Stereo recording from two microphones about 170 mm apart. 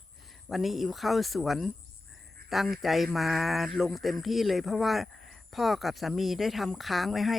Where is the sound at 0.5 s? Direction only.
Centre (ahead or behind).